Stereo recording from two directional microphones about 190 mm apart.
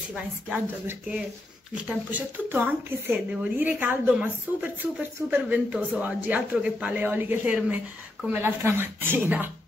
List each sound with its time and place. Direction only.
0.1 s speech: 5° right (ahead or behind)